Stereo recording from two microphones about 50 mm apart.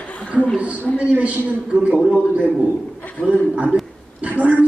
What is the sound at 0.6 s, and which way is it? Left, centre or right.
Speech, right.